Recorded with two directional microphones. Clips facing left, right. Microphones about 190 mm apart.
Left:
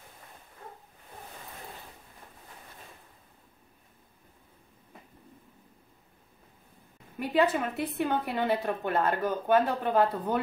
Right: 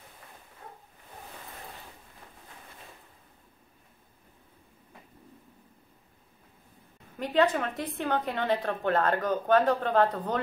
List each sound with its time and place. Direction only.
7.2 s a woman's voice: 10° left (ahead or behind)